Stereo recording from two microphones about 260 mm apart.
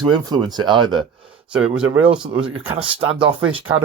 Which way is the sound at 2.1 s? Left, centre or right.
Centre.